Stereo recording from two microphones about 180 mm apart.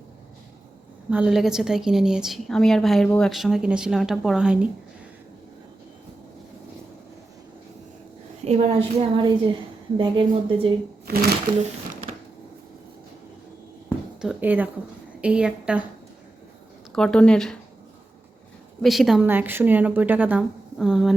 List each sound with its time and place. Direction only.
1.1 s a woman's voice: 5° right (ahead or behind)
8.4 s a woman's voice: 35° right (ahead or behind)
11.0 s speech: 60° right (ahead or behind)
14.2 s a woman's voice: 5° right (ahead or behind)
16.9 s a woman's voice: 5° left (ahead or behind)
18.8 s a woman's voice: centre (ahead or behind)